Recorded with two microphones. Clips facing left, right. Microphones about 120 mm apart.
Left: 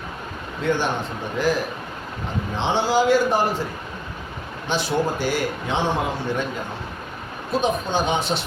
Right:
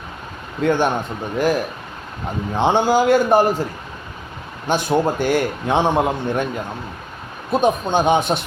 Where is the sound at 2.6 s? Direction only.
50° right (ahead or behind).